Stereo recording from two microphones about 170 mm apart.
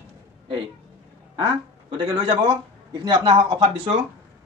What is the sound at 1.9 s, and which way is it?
Speech, 25° right (ahead or behind).